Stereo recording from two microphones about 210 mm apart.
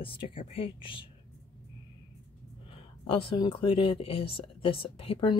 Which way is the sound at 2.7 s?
25° left (ahead or behind).